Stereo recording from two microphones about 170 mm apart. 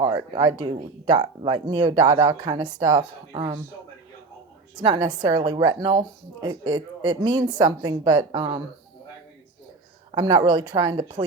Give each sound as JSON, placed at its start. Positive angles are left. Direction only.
{"t": 0.0, "sound": "a woman's voice", "side_deg": -25}
{"t": 4.8, "sound": "a woman's voice", "side_deg": -25}
{"t": 10.2, "sound": "a woman's voice", "side_deg": -25}